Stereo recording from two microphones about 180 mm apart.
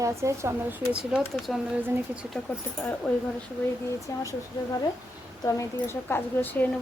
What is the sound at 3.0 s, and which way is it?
Speech, 5° left (ahead or behind).